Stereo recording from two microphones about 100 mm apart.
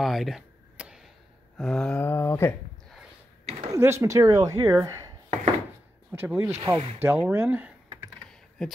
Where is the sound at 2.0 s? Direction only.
25° left (ahead or behind).